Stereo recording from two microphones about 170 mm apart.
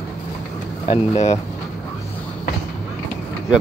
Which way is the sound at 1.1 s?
40° left (ahead or behind).